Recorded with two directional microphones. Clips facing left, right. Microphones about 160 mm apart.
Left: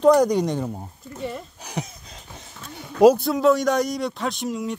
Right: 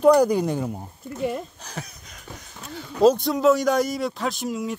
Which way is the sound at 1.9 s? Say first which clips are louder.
Right 1 dB; 25° left (ahead or behind).